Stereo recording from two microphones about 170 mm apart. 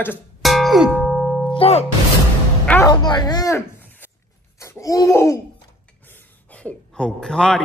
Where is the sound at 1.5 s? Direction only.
35° left (ahead or behind).